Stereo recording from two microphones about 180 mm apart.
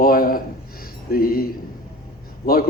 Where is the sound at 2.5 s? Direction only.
55° left (ahead or behind).